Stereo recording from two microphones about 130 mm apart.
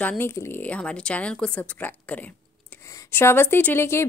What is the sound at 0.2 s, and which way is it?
Speech, 20° left (ahead or behind).